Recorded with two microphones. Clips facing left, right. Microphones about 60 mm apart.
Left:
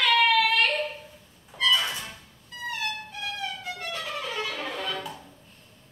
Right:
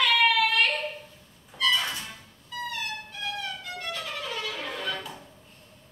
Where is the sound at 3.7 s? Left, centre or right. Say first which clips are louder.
Left 1 dB; left.